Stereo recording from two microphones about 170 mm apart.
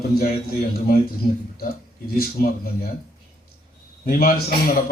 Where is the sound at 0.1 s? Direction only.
60° left (ahead or behind).